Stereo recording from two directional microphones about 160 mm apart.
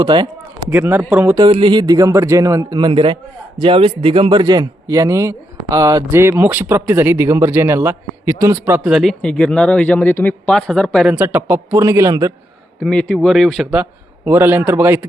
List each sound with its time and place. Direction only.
0.0 s a man's voice: 30° right (ahead or behind)
0.7 s a man's voice: 15° right (ahead or behind)
1.4 s a man's voice: 30° right (ahead or behind)
12.8 s speech: 5° left (ahead or behind)
14.3 s a man's voice: 15° right (ahead or behind)